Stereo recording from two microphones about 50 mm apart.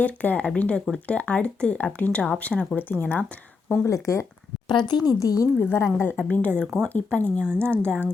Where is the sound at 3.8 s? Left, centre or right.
Left.